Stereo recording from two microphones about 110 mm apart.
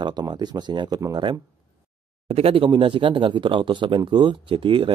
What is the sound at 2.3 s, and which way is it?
Speech, 60° right (ahead or behind).